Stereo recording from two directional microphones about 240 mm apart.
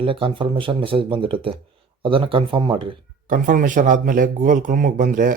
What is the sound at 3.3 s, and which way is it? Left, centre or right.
Speech, right.